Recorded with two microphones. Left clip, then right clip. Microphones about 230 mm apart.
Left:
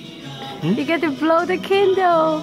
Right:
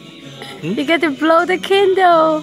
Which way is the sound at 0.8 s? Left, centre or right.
Centre.